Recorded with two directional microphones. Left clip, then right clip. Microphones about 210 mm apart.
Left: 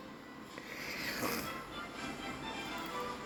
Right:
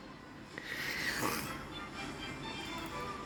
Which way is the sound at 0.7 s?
15° right (ahead or behind).